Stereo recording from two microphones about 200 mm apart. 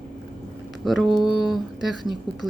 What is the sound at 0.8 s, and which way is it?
Speech, centre (ahead or behind).